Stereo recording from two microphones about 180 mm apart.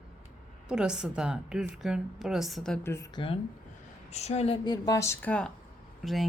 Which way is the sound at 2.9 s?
20° left (ahead or behind).